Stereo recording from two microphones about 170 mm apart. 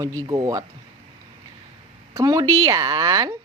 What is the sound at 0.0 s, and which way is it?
Speech, 20° right (ahead or behind).